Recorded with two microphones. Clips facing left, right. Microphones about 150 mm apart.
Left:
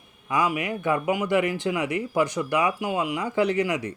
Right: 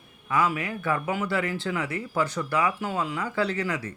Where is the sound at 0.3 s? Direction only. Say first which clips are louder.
Left 1 dB; 15° left (ahead or behind).